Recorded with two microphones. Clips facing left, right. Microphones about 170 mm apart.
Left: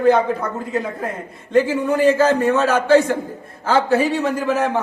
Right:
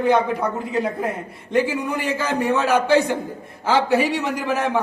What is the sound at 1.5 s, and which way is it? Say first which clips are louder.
A man's voice: left 4 dB; 10° right (ahead or behind).